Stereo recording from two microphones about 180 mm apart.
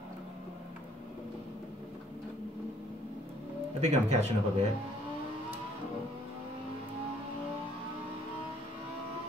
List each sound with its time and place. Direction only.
3.8 s speech: 40° right (ahead or behind)